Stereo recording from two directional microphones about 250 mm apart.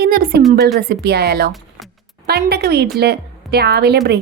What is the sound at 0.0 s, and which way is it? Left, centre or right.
A woman's voice, right.